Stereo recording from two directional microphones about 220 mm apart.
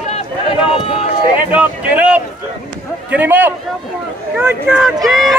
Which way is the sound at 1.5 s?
5° right (ahead or behind).